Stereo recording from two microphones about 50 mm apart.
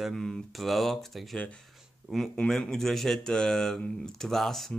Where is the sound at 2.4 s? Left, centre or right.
Centre.